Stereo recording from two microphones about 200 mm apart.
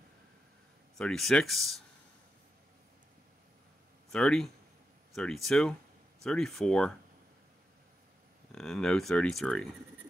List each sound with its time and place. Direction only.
0.9 s speech: 5° left (ahead or behind)
4.1 s speech: centre (ahead or behind)
8.5 s speech: centre (ahead or behind)